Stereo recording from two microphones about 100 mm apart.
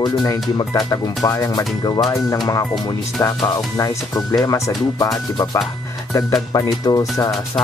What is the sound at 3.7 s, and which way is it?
Speech, 40° left (ahead or behind).